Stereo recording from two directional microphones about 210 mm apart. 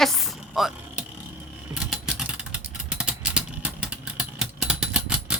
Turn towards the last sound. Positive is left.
turn(degrees=-5)  # may be behind; listen again after turning